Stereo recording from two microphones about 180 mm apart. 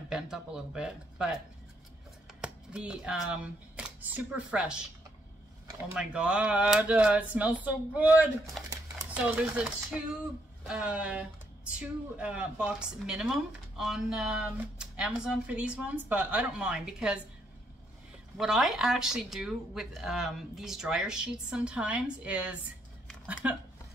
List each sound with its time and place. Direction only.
0.1 s speech: 5° right (ahead or behind)
5.9 s speech: 5° right (ahead or behind)
8.6 s a sound: 15° right (ahead or behind)
10.7 s speech: 5° right (ahead or behind)
18.4 s speech: centre (ahead or behind)